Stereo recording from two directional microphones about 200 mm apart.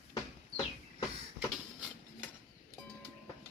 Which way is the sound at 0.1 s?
20° left (ahead or behind).